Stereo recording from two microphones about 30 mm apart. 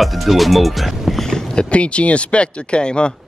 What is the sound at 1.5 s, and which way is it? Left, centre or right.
Speech, left.